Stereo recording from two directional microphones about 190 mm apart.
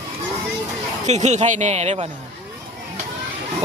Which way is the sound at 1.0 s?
35° right (ahead or behind).